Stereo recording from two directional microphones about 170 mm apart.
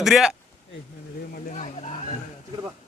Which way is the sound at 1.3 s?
50° left (ahead or behind).